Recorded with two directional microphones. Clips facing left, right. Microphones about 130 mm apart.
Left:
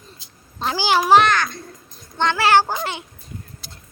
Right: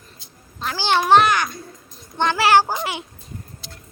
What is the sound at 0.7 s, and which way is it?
Speech, 5° left (ahead or behind).